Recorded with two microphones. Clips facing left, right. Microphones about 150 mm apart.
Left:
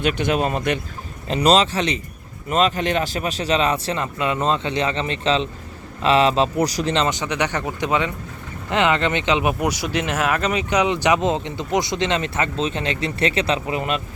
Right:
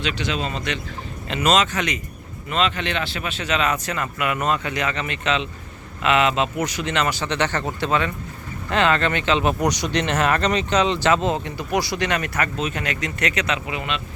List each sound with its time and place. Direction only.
0.0 s speech: 50° left (ahead or behind)
1.3 s speech: 35° left (ahead or behind)
2.5 s speech: 40° left (ahead or behind)